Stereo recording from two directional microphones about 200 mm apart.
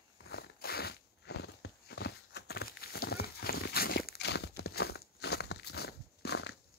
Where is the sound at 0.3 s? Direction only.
50° left (ahead or behind).